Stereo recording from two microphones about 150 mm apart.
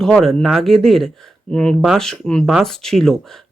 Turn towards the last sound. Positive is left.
turn(degrees=5)  # may be behind; listen again after turning